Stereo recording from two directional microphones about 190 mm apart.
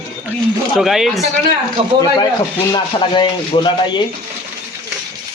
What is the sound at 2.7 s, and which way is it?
Speech, 25° left (ahead or behind).